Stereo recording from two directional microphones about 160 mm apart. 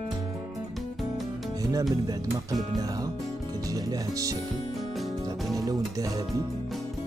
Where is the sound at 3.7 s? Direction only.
20° right (ahead or behind).